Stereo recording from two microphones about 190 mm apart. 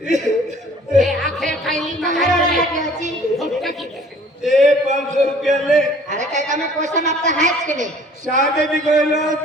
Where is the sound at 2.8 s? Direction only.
40° right (ahead or behind).